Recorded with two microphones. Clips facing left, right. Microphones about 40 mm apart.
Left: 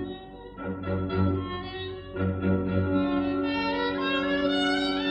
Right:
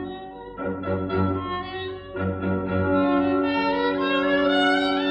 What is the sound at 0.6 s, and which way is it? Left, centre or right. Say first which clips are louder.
Music: right 4 dB; centre.